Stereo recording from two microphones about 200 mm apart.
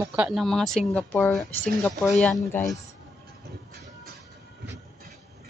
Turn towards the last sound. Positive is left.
turn(degrees=-55)  # may be behind; listen again after turning